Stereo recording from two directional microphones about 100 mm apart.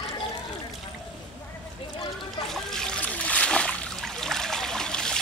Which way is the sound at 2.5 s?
5° left (ahead or behind).